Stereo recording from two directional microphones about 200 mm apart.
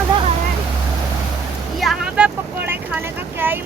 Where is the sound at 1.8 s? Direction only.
5° right (ahead or behind).